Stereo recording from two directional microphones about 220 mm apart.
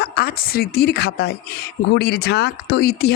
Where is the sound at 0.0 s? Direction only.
45° left (ahead or behind).